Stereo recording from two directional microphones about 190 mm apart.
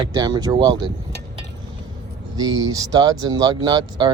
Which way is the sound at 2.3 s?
20° right (ahead or behind).